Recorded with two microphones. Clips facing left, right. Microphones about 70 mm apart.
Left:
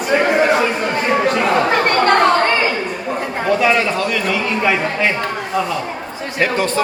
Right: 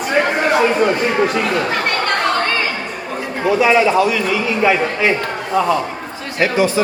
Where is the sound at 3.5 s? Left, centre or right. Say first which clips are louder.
Right 3 dB; centre.